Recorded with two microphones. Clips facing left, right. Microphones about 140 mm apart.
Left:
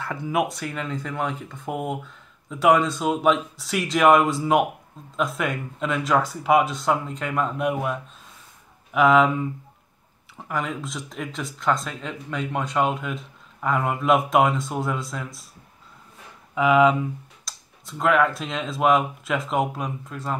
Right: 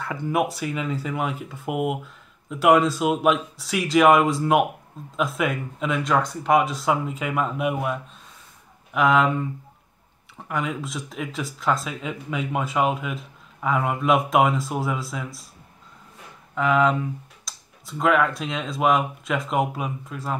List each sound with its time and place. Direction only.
0.0 s speech: centre (ahead or behind)
16.5 s speech: 5° left (ahead or behind)